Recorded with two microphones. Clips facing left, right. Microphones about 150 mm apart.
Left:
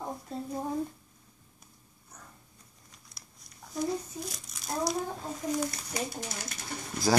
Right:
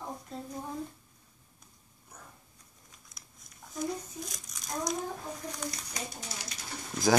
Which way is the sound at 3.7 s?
5° left (ahead or behind).